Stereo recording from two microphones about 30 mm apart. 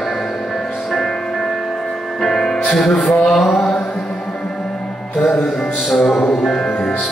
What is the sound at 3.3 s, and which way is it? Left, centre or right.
Mantra, centre.